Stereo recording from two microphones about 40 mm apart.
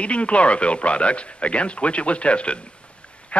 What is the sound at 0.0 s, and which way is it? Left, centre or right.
Speech, left.